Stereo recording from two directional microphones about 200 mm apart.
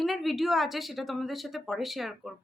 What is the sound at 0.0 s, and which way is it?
A woman's voice, centre (ahead or behind).